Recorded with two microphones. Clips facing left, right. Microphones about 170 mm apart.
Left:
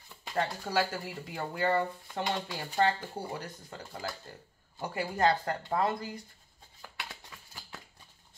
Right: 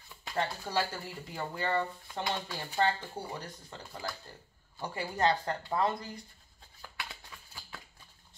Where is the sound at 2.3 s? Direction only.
15° left (ahead or behind).